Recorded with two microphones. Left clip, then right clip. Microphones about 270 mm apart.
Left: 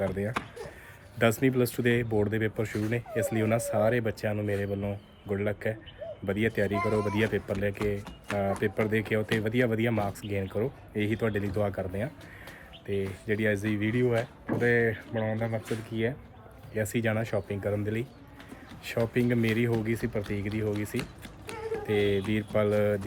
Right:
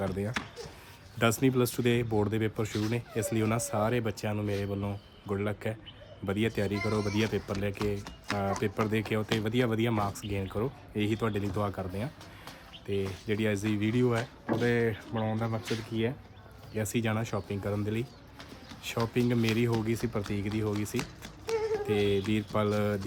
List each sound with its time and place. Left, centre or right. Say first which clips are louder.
0.0 s speech: left 3 dB; centre